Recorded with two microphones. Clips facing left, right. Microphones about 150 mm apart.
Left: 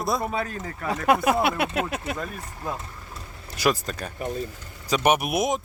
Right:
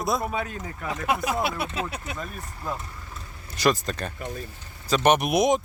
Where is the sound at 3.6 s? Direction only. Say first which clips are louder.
Right 1 dB; 10° left (ahead or behind).